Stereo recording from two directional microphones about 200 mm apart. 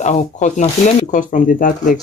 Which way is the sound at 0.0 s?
35° left (ahead or behind).